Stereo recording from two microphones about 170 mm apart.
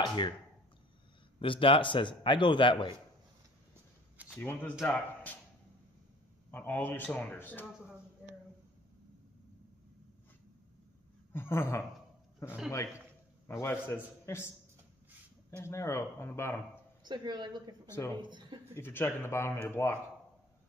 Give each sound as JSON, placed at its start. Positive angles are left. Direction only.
{"t": 0.0, "sound": "speech", "side_deg": 25}
{"t": 1.4, "sound": "a man's voice", "side_deg": 30}
{"t": 4.3, "sound": "speech", "side_deg": 10}
{"t": 6.5, "sound": "speech", "side_deg": 10}
{"t": 11.3, "sound": "speech", "side_deg": 15}
{"t": 12.4, "sound": "a man's voice", "side_deg": -5}
{"t": 13.5, "sound": "a man's voice", "side_deg": 15}
{"t": 15.5, "sound": "speech", "side_deg": 15}
{"t": 17.0, "sound": "speech", "side_deg": -25}
{"t": 17.8, "sound": "speech", "side_deg": 15}
{"t": 18.2, "sound": "speech", "side_deg": -25}
{"t": 18.8, "sound": "speech", "side_deg": 15}